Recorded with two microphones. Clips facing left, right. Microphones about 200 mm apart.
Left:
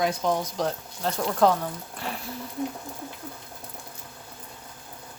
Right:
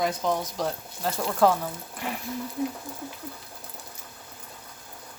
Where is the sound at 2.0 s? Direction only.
15° right (ahead or behind).